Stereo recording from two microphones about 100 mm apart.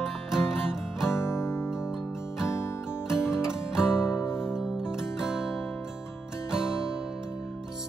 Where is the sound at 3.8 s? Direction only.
25° left (ahead or behind).